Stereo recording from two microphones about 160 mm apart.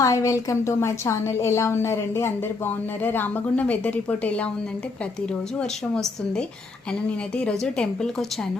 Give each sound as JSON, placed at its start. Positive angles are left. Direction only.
{"t": 0.0, "sound": "a woman's voice", "side_deg": 20}
{"t": 5.5, "sound": "a woman's voice", "side_deg": 5}